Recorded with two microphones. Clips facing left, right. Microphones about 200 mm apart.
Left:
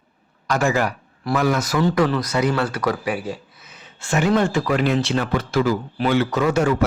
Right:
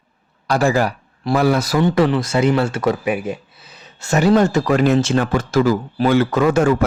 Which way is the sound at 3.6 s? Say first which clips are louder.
Right 2 dB; 35° right (ahead or behind).